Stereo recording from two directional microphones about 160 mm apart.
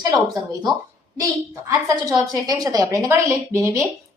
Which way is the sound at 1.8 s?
20° right (ahead or behind).